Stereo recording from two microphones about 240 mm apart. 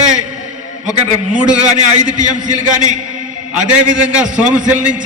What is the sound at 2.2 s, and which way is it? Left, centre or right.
Speech, right.